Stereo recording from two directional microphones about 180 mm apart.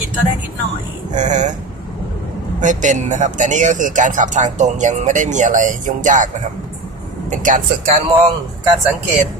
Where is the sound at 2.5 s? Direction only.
45° right (ahead or behind).